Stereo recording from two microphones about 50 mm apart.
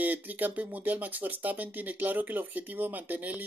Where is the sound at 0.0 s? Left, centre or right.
Right.